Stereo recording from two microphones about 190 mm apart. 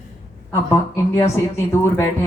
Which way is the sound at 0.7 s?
15° left (ahead or behind).